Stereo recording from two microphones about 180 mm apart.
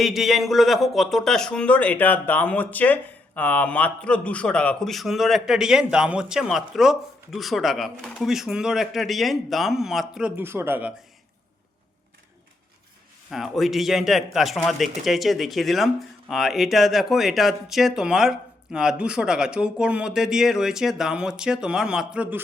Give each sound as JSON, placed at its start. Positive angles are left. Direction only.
{"t": 0.0, "sound": "speech", "side_deg": 0}
{"t": 13.3, "sound": "speech", "side_deg": 0}